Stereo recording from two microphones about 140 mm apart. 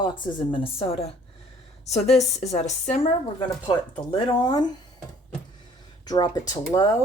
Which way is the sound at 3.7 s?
40° left (ahead or behind).